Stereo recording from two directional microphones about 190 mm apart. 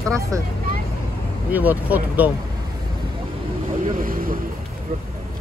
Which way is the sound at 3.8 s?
45° right (ahead or behind).